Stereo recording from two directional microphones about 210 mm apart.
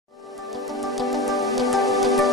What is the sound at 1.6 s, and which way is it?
Music, centre (ahead or behind).